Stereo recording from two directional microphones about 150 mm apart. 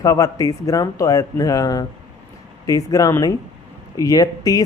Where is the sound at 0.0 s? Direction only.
20° left (ahead or behind).